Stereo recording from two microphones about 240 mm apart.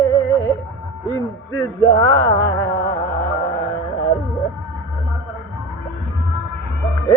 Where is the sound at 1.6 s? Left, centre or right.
Centre.